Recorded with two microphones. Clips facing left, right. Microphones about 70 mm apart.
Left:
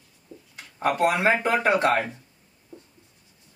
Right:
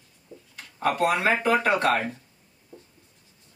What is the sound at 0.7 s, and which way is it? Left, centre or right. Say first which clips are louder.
Speech: left 1 dB; left.